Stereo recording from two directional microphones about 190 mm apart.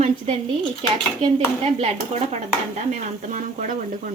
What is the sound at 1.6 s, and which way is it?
Speech, 35° right (ahead or behind).